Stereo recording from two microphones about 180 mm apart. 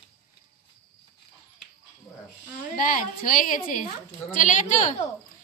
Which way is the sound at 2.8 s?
50° left (ahead or behind).